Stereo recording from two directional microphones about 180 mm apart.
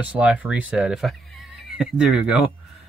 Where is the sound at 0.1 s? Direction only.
5° right (ahead or behind).